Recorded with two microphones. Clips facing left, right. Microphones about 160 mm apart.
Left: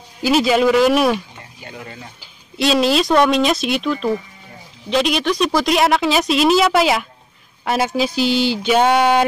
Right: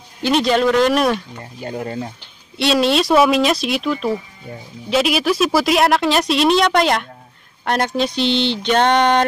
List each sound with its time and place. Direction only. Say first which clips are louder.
0.2 s speech: left 1 dB; 5° left (ahead or behind)
1.6 s speech: right 10 dB; 40° right (ahead or behind)
2.5 s speech: even; centre (ahead or behind)